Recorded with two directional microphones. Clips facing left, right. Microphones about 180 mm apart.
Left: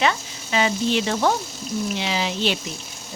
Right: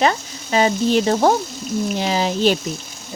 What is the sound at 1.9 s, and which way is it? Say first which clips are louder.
Speech: right 5 dB; 40° right (ahead or behind).